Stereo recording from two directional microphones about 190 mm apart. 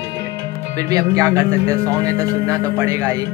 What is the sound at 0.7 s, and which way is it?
Speech, 20° right (ahead or behind).